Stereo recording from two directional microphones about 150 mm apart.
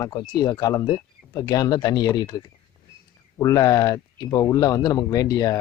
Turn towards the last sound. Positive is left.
turn(degrees=25)  # may be behind; listen again after turning